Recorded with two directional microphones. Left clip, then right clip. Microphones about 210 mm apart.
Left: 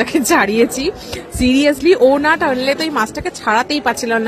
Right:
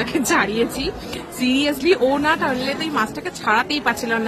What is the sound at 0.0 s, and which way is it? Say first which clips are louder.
A woman's voice: left 5 dB; 35° left (ahead or behind).